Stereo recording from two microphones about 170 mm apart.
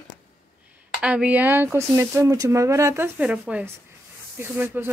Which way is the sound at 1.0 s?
5° right (ahead or behind).